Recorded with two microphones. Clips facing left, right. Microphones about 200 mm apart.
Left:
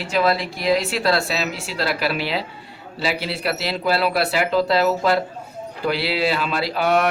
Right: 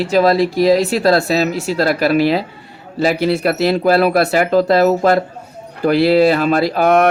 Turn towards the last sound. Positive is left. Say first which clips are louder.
# right 7 dB
turn(degrees=-50)  # may be behind; listen again after turning